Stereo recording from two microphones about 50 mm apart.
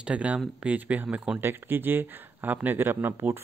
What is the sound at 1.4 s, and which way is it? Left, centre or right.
Speech, right.